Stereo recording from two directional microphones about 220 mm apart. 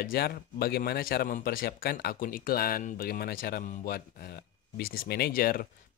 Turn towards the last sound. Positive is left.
turn(degrees=40)  # may be behind; listen again after turning